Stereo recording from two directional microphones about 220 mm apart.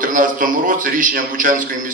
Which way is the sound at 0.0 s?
40° right (ahead or behind).